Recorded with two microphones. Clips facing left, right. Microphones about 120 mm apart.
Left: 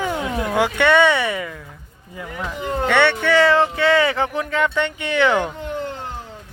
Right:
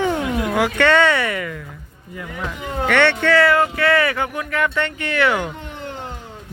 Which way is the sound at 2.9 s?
15° left (ahead or behind).